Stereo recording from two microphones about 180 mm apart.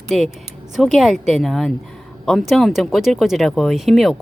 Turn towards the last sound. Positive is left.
turn(degrees=0)  # may be behind; listen again after turning